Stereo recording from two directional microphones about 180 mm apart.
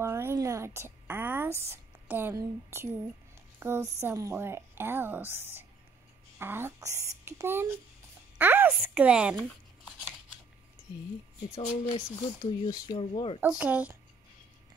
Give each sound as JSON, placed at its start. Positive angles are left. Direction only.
{"t": 0.0, "sound": "a woman's voice", "side_deg": -15}
{"t": 11.9, "sound": "speech", "side_deg": 20}
{"t": 13.4, "sound": "a woman's voice", "side_deg": -10}